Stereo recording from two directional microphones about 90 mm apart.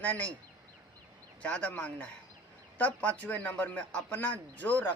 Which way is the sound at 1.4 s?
15° left (ahead or behind).